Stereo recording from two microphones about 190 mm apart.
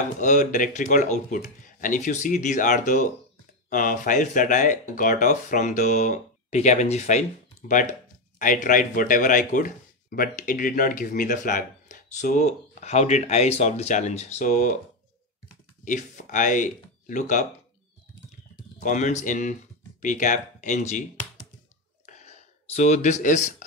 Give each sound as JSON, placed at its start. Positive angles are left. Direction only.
{"t": 0.2, "sound": "speech", "side_deg": 40}
{"t": 15.8, "sound": "speech", "side_deg": 40}
{"t": 18.8, "sound": "speech", "side_deg": 40}
{"t": 22.0, "sound": "a sound", "side_deg": 40}